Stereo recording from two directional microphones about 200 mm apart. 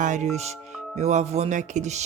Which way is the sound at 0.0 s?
40° right (ahead or behind).